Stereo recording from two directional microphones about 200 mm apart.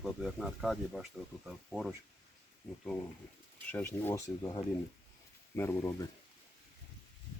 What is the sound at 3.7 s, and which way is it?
Speech, 10° left (ahead or behind).